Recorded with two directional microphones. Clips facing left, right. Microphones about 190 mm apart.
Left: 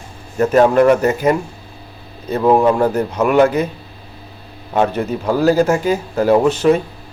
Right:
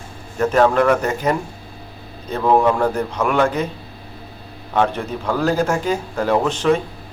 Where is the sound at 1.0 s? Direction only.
5° left (ahead or behind).